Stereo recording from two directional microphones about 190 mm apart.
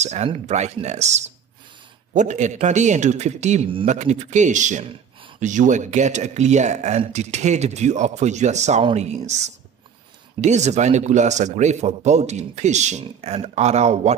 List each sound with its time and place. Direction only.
0.0 s speech: 35° right (ahead or behind)